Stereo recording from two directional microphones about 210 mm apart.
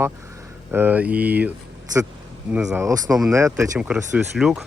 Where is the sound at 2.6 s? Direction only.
15° right (ahead or behind).